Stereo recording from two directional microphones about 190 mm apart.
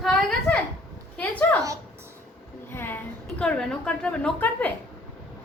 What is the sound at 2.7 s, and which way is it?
A woman's voice, 10° left (ahead or behind).